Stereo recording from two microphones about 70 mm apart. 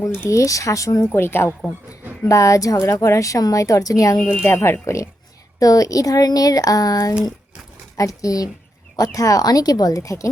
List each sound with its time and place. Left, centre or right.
0.3 s a woman's voice: left
1.1 s speech: left
2.2 s a woman's voice: left
2.7 s a woman's voice: left
4.4 s speech: left
5.5 s speech: left
7.9 s a woman's voice: left